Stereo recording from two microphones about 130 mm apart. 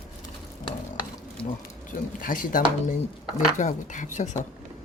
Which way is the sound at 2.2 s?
90° left.